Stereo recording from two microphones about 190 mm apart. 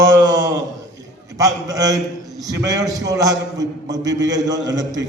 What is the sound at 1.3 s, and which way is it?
A man's voice, 20° right (ahead or behind).